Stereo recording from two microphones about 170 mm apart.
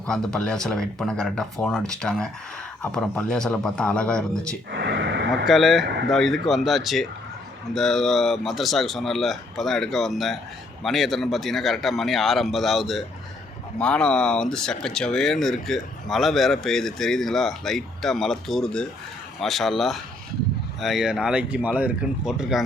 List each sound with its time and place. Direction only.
0.0 s speech: 5° left (ahead or behind)
4.7 s a sound: 90° right
5.5 s speech: centre (ahead or behind)